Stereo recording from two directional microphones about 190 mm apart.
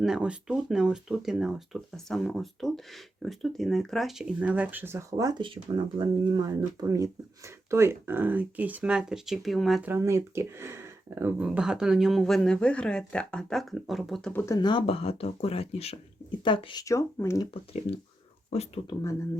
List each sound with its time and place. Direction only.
0.0 s speech: 5° right (ahead or behind)
9.9 s speech: 15° right (ahead or behind); by 14.4 s 5° left (ahead or behind)
14.4 s speech: 20° left (ahead or behind)